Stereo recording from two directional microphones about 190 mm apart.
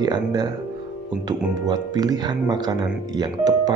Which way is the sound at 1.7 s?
20° right (ahead or behind).